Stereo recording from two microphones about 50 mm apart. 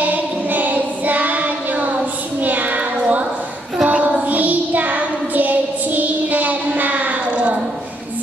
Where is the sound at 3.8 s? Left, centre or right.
Right.